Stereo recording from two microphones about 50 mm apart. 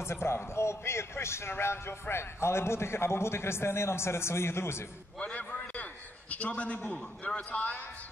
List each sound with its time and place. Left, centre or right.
0.0 s a man's voice: left
5.2 s a sound: left
6.3 s a man's voice: left